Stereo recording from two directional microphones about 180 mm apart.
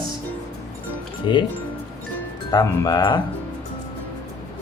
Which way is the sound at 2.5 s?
20° left (ahead or behind).